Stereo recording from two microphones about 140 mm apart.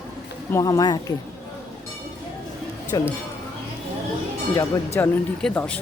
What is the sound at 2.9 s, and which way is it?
Speech, 30° left (ahead or behind).